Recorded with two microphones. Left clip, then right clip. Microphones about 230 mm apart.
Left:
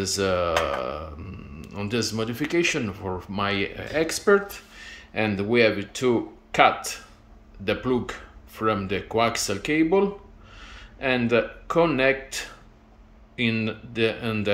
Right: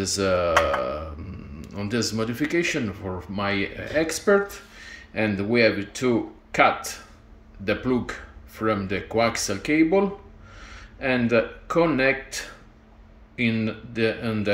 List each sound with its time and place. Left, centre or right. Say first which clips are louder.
0.0 s speech: right 1 dB; centre